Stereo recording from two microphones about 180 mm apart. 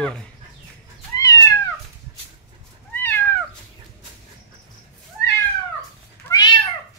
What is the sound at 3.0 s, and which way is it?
Cat, 10° left (ahead or behind).